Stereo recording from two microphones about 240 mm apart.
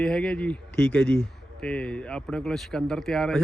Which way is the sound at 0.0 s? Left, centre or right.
Centre.